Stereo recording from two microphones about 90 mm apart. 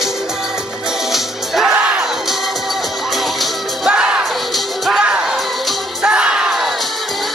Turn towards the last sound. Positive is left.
turn(degrees=-5)  # may be behind; listen again after turning